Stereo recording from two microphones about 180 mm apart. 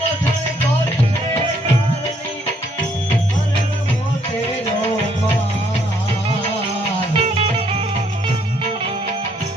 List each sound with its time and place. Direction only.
7.1 s music: 35° right (ahead or behind)